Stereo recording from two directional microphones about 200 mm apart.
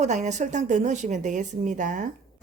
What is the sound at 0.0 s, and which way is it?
A woman's voice, 35° right (ahead or behind).